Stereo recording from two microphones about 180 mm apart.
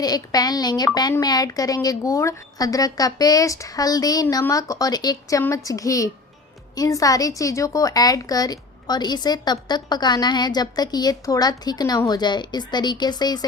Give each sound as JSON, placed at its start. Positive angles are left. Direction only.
{"t": 0.0, "sound": "a woman's voice", "side_deg": 20}